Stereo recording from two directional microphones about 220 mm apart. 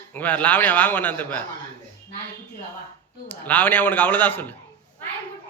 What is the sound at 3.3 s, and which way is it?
A man's voice, 10° left (ahead or behind).